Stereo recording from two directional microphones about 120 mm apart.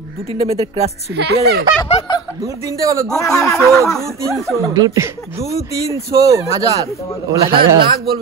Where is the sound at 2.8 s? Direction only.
30° right (ahead or behind).